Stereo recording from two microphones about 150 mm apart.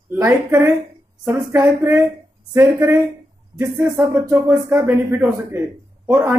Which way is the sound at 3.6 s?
20° right (ahead or behind).